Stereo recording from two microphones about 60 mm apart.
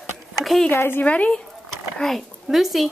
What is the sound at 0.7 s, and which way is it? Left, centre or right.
Speech, left.